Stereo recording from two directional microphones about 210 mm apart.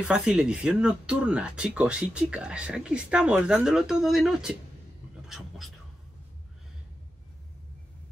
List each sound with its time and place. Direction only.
0.1 s speech: 5° right (ahead or behind)